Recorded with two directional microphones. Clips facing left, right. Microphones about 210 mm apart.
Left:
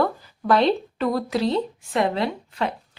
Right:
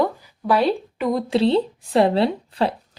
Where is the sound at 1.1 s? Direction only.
25° right (ahead or behind).